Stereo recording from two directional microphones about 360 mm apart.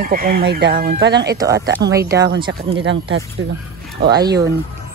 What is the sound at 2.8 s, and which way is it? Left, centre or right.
Speech, right.